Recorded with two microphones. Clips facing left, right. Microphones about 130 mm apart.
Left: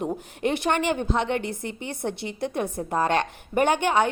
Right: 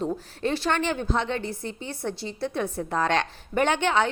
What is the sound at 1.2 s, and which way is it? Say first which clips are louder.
Speech: left 2 dB; 60° left (ahead or behind).